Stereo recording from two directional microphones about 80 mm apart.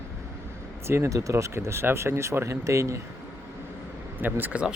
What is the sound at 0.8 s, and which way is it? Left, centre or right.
Speech, right.